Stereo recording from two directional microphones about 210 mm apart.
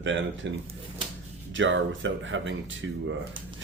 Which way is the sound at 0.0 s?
60° right (ahead or behind).